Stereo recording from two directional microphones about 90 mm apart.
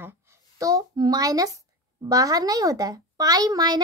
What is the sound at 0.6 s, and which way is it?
A child's voice, 45° right (ahead or behind).